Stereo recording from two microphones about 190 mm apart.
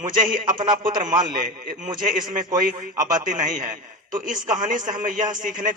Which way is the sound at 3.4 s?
40° right (ahead or behind).